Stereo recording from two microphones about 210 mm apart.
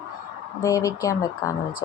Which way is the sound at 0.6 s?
15° left (ahead or behind).